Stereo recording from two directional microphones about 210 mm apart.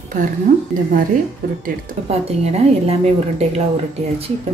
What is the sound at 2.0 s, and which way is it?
A woman's voice, 30° right (ahead or behind).